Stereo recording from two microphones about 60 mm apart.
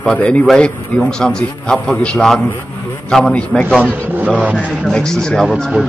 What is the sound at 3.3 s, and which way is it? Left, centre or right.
Speech, centre.